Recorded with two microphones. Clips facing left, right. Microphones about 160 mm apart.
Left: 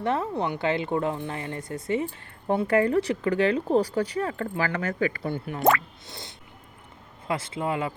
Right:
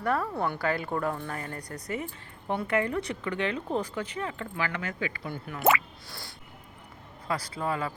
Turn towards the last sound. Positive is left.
turn(degrees=20)  # may be behind; listen again after turning